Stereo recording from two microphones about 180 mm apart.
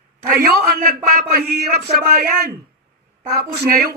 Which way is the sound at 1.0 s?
55° right (ahead or behind).